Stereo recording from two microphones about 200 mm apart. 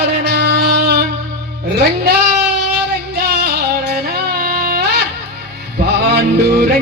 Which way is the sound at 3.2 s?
55° right (ahead or behind).